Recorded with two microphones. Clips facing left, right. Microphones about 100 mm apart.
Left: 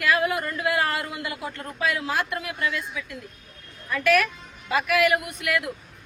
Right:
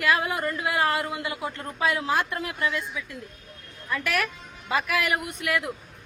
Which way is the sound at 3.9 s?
20° right (ahead or behind).